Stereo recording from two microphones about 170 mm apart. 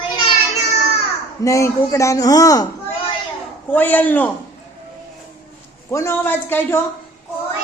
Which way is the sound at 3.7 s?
10° left (ahead or behind).